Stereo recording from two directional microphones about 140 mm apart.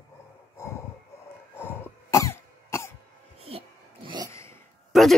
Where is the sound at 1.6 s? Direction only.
15° left (ahead or behind).